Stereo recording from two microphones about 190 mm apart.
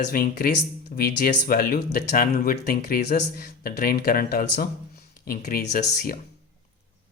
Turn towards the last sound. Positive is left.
turn(degrees=55)  # may be behind; listen again after turning